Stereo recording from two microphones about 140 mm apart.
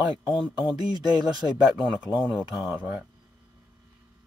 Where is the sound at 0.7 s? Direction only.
30° right (ahead or behind).